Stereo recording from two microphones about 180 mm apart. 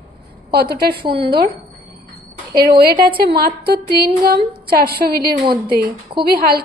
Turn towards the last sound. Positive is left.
turn(degrees=-60)  # may be behind; listen again after turning